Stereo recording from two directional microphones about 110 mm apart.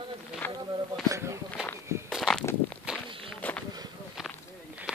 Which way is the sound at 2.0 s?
Centre (ahead or behind).